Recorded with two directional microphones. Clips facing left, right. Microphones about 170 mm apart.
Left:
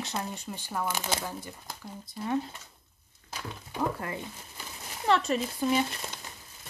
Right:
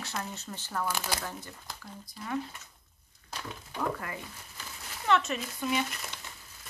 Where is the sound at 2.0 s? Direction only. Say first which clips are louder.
Left 5 dB; 25° left (ahead or behind).